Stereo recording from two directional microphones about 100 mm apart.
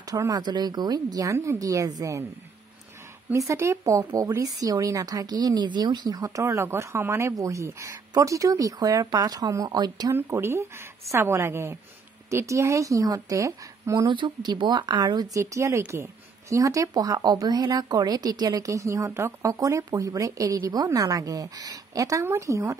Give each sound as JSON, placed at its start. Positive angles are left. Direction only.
{"t": 0.0, "sound": "speech", "side_deg": -35}
{"t": 3.3, "sound": "speech", "side_deg": -30}
{"t": 10.1, "sound": "a woman's voice", "side_deg": -25}
{"t": 14.0, "sound": "speech", "side_deg": -50}